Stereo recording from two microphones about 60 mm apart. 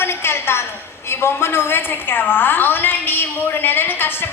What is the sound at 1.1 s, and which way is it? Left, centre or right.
A woman's voice, left.